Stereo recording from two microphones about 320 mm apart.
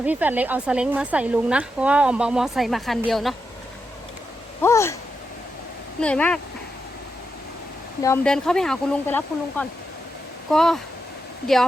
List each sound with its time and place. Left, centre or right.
0.0 s speech: centre
4.6 s a sound: centre
6.0 s speech: centre
8.0 s speech: centre